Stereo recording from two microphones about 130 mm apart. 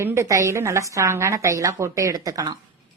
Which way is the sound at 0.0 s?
20° right (ahead or behind).